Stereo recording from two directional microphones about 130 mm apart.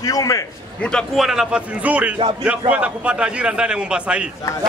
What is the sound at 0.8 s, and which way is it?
A man's voice, centre (ahead or behind).